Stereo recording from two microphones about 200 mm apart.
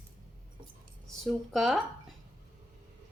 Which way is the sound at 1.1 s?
Centre (ahead or behind).